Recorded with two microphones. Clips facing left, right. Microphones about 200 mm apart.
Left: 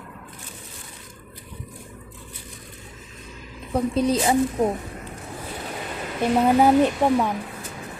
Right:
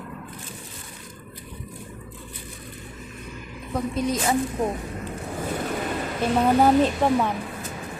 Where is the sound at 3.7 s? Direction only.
30° left (ahead or behind).